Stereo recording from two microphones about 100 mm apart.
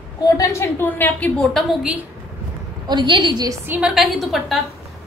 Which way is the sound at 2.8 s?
50° right (ahead or behind).